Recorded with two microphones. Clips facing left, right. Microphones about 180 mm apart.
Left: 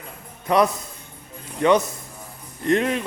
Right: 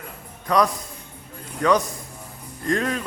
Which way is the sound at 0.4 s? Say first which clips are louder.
Left 2 dB; 25° left (ahead or behind).